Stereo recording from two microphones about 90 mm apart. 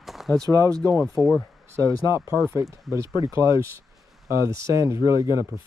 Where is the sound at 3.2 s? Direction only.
35° right (ahead or behind).